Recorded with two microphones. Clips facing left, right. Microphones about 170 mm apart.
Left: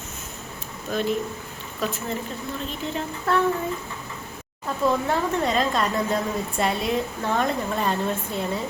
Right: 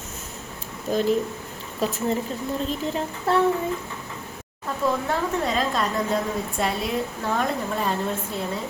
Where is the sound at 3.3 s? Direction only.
30° right (ahead or behind).